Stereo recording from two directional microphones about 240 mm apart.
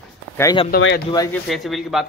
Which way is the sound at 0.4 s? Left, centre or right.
Centre.